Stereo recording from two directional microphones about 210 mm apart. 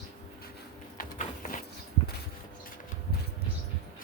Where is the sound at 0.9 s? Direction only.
40° left (ahead or behind).